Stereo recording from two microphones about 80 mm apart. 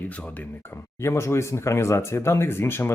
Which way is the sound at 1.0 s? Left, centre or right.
Left.